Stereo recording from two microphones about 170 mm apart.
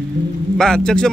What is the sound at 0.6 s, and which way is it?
Speech, 5° left (ahead or behind).